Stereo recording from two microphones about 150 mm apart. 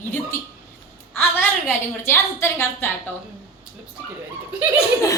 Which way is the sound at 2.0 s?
15° left (ahead or behind).